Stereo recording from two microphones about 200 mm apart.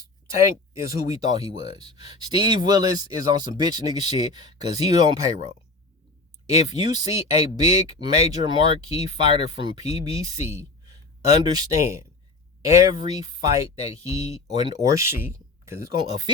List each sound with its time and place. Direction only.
0.3 s speech: 15° right (ahead or behind)
6.7 s speech: 20° right (ahead or behind)